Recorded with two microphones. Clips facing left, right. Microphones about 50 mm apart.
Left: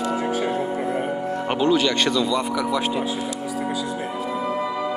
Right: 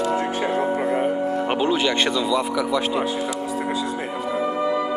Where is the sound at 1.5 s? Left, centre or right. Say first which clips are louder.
Left 4 dB; centre.